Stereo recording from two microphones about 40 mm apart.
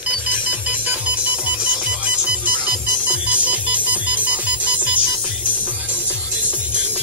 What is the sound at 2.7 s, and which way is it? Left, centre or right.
Music, right.